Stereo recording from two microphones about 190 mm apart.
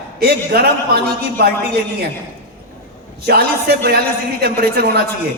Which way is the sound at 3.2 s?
55° right (ahead or behind).